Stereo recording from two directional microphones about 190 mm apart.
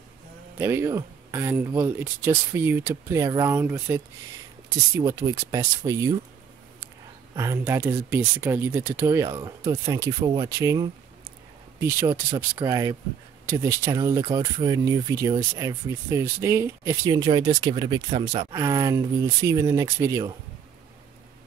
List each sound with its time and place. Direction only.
0.6 s speech: 15° right (ahead or behind)
7.3 s speech: 15° right (ahead or behind)